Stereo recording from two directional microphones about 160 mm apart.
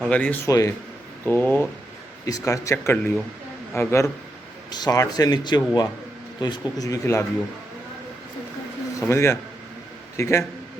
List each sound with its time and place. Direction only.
0.1 s speech: 10° left (ahead or behind)
9.0 s speech: 15° left (ahead or behind)